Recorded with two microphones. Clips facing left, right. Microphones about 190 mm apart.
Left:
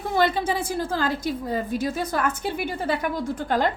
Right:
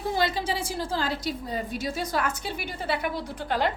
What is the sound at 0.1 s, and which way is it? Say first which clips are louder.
A woman's voice: left 5 dB; 55° left (ahead or behind).